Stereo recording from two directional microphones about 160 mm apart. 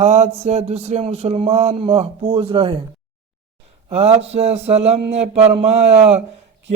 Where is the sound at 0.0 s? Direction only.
45° right (ahead or behind).